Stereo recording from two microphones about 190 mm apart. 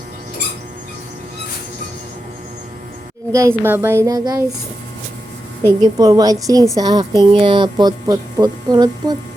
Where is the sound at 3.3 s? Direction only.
15° right (ahead or behind).